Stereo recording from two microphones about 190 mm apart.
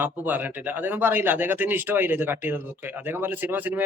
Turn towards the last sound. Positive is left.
turn(degrees=-10)  # may be behind; listen again after turning